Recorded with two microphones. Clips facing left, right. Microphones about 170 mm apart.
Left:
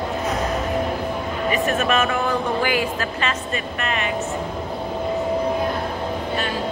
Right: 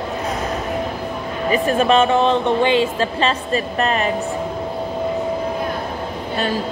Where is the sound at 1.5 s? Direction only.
30° right (ahead or behind).